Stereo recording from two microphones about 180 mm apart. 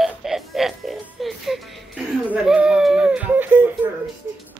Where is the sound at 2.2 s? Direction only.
5° right (ahead or behind).